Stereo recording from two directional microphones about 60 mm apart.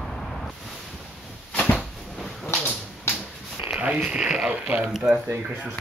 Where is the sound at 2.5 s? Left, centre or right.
Left.